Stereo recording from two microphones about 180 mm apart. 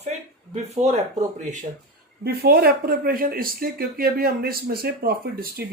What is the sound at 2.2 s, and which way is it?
Speech, 60° right (ahead or behind).